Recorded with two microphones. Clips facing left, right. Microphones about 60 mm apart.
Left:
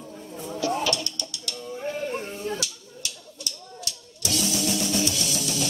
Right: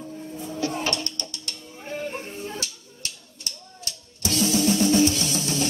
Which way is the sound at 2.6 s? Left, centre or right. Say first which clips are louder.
Left 1 dB; right.